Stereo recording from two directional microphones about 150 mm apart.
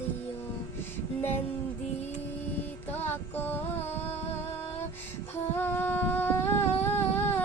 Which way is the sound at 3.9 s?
45° left (ahead or behind).